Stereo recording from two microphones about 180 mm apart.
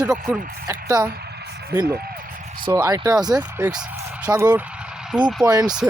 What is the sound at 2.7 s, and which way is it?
Speech, 20° right (ahead or behind).